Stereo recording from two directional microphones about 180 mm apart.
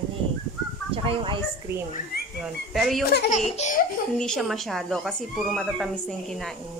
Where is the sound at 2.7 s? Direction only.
Centre (ahead or behind).